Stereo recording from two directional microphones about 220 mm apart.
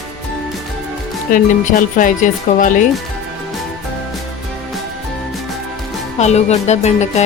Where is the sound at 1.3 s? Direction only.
40° left (ahead or behind).